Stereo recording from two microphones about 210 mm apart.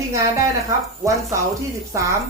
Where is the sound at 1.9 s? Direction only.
15° right (ahead or behind).